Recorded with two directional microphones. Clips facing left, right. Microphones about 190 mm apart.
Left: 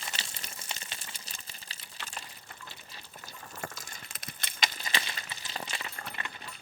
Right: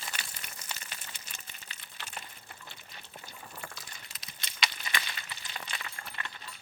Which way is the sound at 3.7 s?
50° left (ahead or behind).